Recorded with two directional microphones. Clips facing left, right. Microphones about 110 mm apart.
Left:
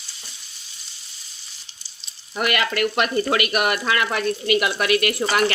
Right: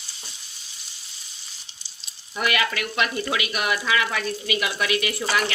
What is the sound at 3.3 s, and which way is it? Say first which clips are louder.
Speech: left 5 dB; 60° left (ahead or behind).